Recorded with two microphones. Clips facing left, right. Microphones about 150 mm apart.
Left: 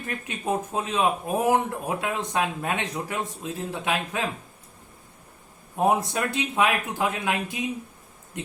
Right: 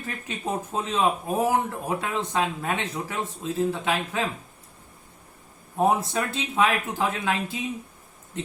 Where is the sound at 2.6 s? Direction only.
15° left (ahead or behind).